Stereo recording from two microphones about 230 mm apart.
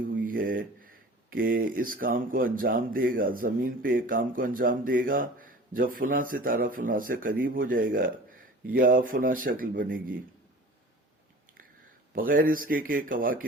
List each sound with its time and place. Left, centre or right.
0.1 s speech: right
12.1 s speech: right